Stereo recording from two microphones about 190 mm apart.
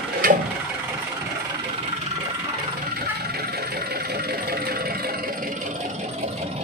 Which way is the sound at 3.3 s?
55° right (ahead or behind).